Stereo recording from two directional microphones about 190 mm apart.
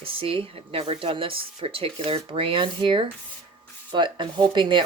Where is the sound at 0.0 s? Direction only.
30° right (ahead or behind).